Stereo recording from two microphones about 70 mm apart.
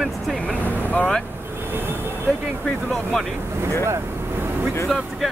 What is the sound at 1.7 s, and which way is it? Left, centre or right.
Speech, right.